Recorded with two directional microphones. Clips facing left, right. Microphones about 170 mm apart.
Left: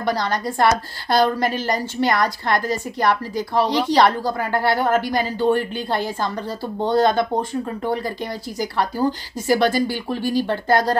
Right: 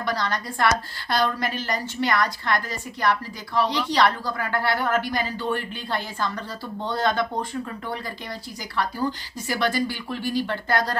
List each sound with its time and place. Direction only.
0.0 s a woman's voice: 40° left (ahead or behind)
8.5 s a woman's voice: 40° left (ahead or behind)